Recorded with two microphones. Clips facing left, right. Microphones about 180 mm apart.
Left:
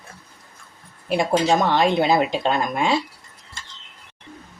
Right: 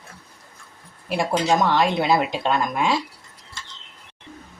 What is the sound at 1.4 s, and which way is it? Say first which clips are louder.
Speech: right 2 dB; 25° left (ahead or behind).